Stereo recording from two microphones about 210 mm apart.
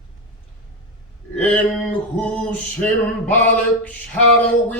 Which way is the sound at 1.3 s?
5° left (ahead or behind).